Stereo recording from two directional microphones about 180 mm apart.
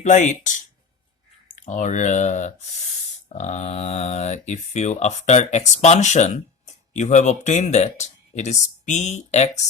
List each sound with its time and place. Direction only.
0.0 s speech: 40° left (ahead or behind)
1.5 s speech: 45° left (ahead or behind)